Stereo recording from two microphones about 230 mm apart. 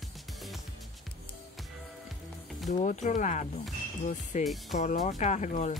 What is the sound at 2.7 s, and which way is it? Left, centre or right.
Speech, left.